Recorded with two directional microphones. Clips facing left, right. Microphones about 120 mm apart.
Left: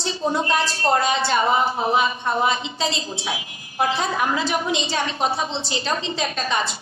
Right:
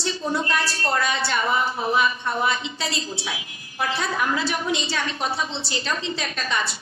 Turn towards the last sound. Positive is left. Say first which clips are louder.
# left 3 dB
turn(degrees=25)  # may be behind; listen again after turning